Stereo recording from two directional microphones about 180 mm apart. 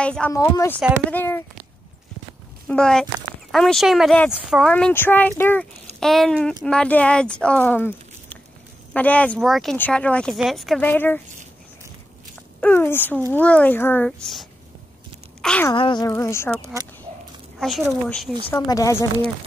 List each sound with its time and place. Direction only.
0.0 s speech: 5° left (ahead or behind)
0.3 s speech: 15° left (ahead or behind)
2.7 s speech: 5° left (ahead or behind)
12.5 s speech: 10° left (ahead or behind)
15.7 s speech: 25° left (ahead or behind); by 18.3 s centre (ahead or behind)
18.5 s speech: 20° left (ahead or behind)